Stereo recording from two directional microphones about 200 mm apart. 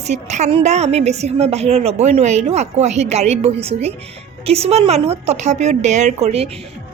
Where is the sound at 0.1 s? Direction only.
35° right (ahead or behind).